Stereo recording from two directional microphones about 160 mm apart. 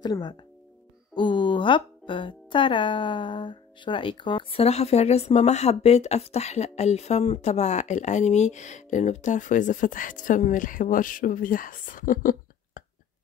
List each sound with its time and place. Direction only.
0.0 s speech: 25° left (ahead or behind); by 12.8 s 60° left (ahead or behind)